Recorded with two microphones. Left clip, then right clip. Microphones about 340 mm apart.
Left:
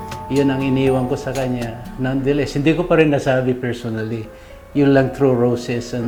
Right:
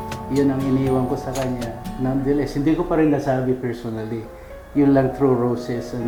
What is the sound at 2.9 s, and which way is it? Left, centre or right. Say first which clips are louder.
Speech: left 6 dB; left.